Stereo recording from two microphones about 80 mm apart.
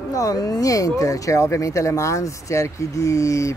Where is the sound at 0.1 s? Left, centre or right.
Left.